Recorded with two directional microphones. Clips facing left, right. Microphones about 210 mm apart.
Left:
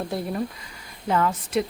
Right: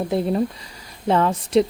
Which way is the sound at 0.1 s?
25° right (ahead or behind).